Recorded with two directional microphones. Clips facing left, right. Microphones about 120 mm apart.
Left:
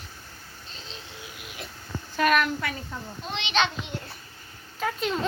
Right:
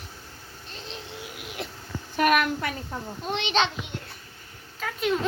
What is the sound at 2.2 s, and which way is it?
Speech, 10° right (ahead or behind).